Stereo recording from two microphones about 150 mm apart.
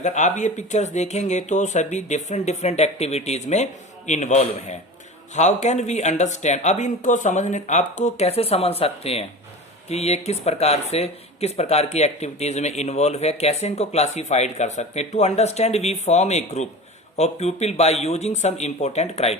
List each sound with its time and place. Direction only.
0.0 s speech: 50° left (ahead or behind)